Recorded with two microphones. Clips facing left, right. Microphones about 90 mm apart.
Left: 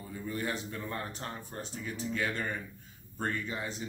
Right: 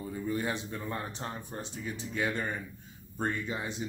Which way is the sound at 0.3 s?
20° right (ahead or behind).